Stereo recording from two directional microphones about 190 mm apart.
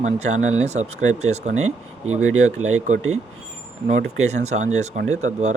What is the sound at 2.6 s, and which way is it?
Speech, 90° right.